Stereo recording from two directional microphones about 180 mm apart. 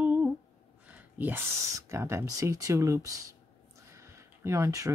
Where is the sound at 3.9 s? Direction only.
15° right (ahead or behind).